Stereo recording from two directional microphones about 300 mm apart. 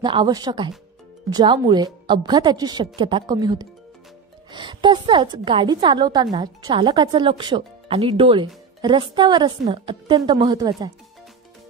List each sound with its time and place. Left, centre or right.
0.0 s a woman's voice: centre